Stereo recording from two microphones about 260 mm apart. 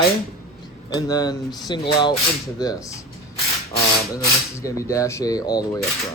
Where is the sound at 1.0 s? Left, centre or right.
Centre.